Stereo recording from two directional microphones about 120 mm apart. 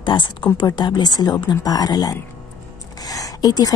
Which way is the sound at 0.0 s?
40° left (ahead or behind).